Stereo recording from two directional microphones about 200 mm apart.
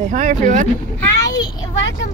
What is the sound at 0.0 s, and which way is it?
Speech, 40° right (ahead or behind).